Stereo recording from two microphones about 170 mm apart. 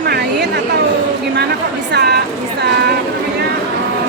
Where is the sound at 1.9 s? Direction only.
75° right (ahead or behind).